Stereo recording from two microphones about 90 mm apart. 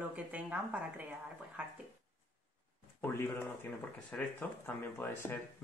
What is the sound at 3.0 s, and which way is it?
Speech, 25° left (ahead or behind).